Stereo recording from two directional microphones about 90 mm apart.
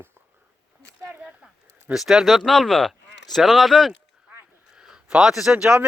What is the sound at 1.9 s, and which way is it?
A man's voice, 5° right (ahead or behind).